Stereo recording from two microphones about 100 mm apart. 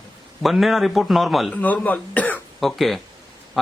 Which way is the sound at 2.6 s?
Centre (ahead or behind).